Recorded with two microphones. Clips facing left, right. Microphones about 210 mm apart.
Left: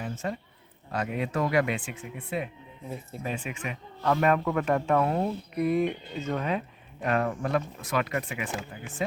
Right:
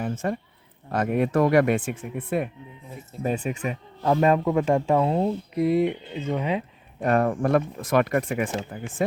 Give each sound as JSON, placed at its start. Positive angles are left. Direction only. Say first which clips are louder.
{"t": 0.0, "sound": "a sound", "louder": "right 6 dB", "side_deg": -50}
{"t": 0.9, "sound": "speech", "louder": "right 7 dB", "side_deg": -50}
{"t": 3.2, "sound": "speech", "louder": "right 8 dB", "side_deg": -40}
{"t": 4.0, "sound": "speech", "louder": "right 4 dB", "side_deg": -25}
{"t": 7.0, "sound": "speech", "louder": "right 6 dB", "side_deg": -45}